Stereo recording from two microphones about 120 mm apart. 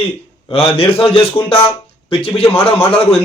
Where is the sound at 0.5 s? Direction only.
50° left (ahead or behind).